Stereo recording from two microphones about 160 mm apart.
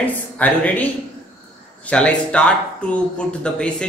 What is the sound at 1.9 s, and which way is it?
Speech, 5° left (ahead or behind).